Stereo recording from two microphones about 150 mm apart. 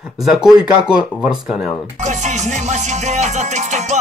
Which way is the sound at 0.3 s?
5° right (ahead or behind).